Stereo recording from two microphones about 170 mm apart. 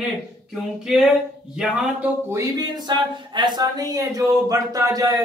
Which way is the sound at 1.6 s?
5° right (ahead or behind).